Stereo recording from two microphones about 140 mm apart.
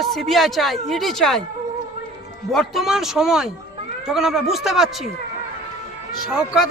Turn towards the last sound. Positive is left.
turn(degrees=-5)  # may be behind; listen again after turning